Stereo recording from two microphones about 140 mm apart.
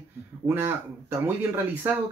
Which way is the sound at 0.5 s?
15° right (ahead or behind).